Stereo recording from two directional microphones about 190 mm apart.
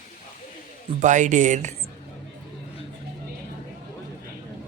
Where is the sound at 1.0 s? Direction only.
40° right (ahead or behind).